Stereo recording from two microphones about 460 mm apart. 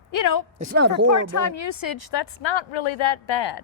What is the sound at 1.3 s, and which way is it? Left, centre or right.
Speech, left.